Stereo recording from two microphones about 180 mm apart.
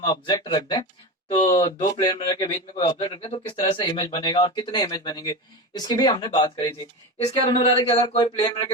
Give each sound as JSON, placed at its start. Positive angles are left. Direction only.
{"t": 0.0, "sound": "speech", "side_deg": 25}